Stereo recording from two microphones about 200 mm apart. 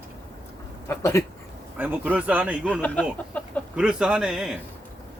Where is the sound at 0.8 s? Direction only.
15° left (ahead or behind).